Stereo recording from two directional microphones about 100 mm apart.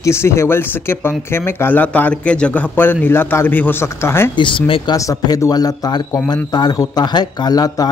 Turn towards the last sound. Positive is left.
turn(degrees=40)  # may be behind; listen again after turning